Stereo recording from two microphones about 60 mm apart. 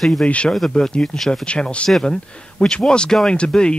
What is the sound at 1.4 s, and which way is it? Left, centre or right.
Speech, centre.